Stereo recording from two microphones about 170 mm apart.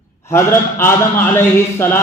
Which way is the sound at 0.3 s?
15° left (ahead or behind).